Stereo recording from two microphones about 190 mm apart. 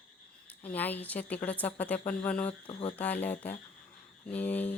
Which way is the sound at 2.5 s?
30° left (ahead or behind).